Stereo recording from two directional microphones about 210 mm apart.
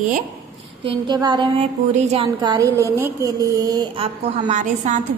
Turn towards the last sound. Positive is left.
turn(degrees=-35)  # may be behind; listen again after turning